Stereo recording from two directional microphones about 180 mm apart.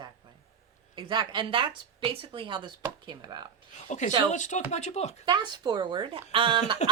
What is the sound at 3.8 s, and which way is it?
A man's voice, 40° left (ahead or behind).